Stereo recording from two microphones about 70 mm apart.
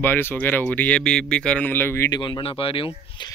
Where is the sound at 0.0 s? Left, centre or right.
Left; by 1.7 s centre.